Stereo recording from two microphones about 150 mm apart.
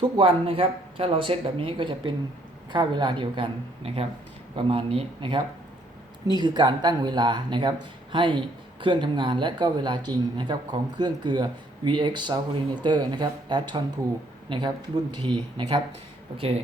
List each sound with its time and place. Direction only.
0.0 s speech: 35° right (ahead or behind)